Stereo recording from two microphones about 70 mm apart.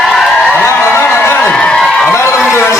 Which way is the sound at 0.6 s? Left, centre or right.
Left.